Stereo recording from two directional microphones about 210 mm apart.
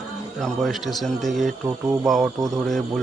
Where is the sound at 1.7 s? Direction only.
15° right (ahead or behind).